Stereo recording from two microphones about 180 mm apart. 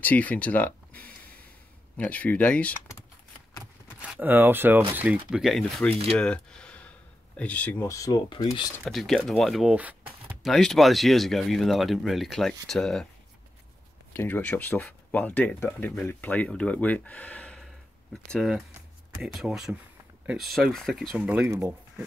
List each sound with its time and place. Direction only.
0.0 s speech: 10° left (ahead or behind)
4.0 s speech: 10° right (ahead or behind)
6.1 s a sound: 5° left (ahead or behind)
7.3 s speech: 10° left (ahead or behind)
8.8 s speech: centre (ahead or behind)
14.1 s speech: 10° left (ahead or behind)
21.5 s speech: 15° right (ahead or behind)